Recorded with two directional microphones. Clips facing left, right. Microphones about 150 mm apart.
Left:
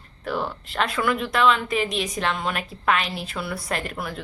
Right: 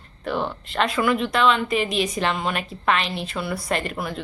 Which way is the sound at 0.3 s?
5° left (ahead or behind).